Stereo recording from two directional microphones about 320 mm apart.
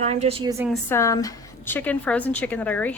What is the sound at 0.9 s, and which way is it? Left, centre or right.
A woman's voice, centre.